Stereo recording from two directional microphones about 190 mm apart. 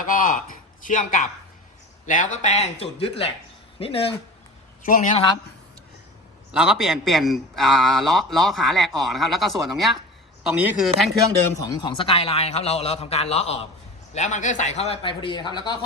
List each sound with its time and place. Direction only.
0.0 s a man's voice: 45° left (ahead or behind)
4.8 s a man's voice: 45° left (ahead or behind)
6.5 s a man's voice: 5° right (ahead or behind)
11.6 s a man's voice: 20° left (ahead or behind)